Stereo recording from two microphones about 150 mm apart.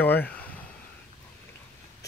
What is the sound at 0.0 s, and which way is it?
Speech, 10° left (ahead or behind).